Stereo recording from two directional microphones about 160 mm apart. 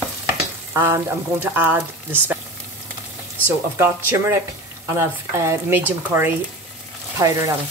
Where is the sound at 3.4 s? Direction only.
15° right (ahead or behind).